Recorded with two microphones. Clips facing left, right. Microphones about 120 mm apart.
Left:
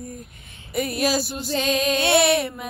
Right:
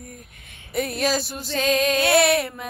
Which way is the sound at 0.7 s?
5° left (ahead or behind).